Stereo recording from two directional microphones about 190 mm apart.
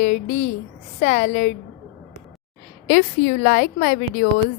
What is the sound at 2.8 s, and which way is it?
Speech, 45° left (ahead or behind).